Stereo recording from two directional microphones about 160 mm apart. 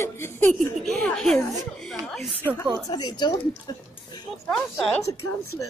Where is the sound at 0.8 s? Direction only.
5° left (ahead or behind).